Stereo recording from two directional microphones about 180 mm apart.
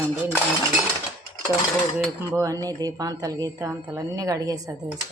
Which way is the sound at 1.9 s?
15° right (ahead or behind).